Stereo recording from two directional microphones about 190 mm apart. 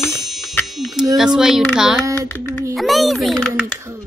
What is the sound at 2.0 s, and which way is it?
Speech, 15° right (ahead or behind).